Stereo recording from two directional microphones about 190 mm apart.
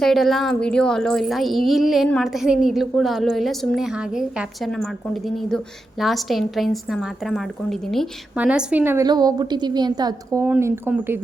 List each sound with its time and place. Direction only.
0.0 s a woman's voice: centre (ahead or behind)
9.0 s a woman's voice: 20° right (ahead or behind)